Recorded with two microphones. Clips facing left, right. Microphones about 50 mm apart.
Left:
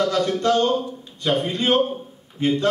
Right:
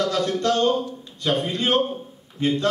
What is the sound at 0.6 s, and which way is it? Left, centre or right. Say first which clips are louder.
A man's voice: left 1 dB; centre.